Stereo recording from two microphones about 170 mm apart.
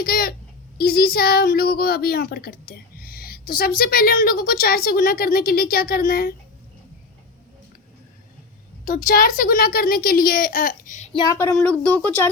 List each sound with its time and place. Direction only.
0.0 s a woman's voice: 60° left (ahead or behind)
8.8 s a woman's voice: 50° left (ahead or behind)
11.1 s speech: 25° left (ahead or behind)
11.5 s speech: 5° left (ahead or behind)